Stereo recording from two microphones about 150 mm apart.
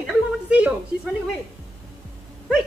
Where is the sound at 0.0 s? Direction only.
10° right (ahead or behind).